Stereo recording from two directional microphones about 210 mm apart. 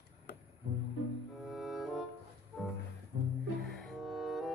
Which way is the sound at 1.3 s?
Centre (ahead or behind).